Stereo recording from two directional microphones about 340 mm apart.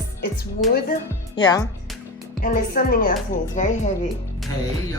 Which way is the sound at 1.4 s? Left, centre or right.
Centre.